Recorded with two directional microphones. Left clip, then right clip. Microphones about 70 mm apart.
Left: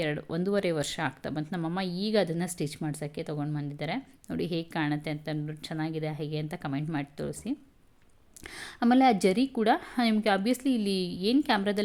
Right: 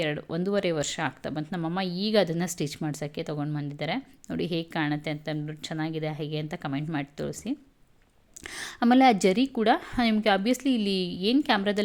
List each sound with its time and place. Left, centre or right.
0.0 s speech: centre